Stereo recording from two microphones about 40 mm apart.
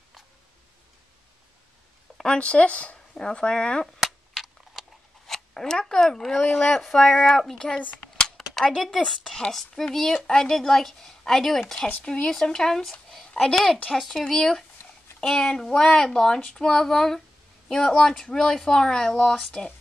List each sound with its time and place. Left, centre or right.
2.2 s speech: left
3.2 s speech: centre
4.0 s a sound: centre
5.2 s speech: centre
8.0 s a sound: centre
8.8 s speech: centre
12.0 s a woman's voice: centre
13.9 s speech: centre
16.8 s speech: centre; by 19.7 s left